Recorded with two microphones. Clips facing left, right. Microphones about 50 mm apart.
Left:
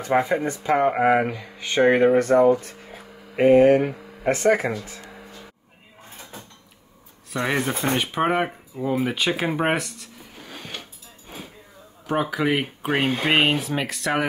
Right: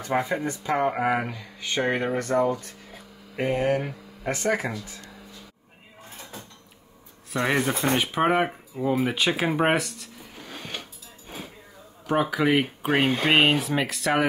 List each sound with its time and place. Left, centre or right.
0.0 s speech: left
4.3 s speech: centre
6.0 s a sound: left
7.3 s speech: centre
9.0 s a sound: centre
12.1 s speech: centre